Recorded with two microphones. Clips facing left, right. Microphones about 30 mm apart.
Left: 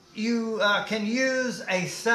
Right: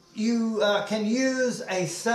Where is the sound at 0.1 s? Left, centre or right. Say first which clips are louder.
Right 2 dB; left.